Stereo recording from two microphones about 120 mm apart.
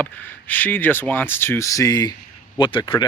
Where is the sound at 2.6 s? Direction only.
45° left (ahead or behind).